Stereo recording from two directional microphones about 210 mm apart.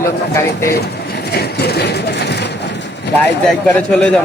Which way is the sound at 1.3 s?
50° left (ahead or behind).